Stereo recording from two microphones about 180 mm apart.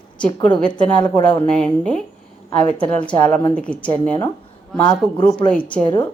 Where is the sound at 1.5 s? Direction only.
5° left (ahead or behind).